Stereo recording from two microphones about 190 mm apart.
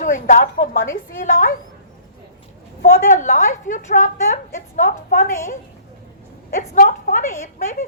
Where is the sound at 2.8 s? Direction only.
40° left (ahead or behind).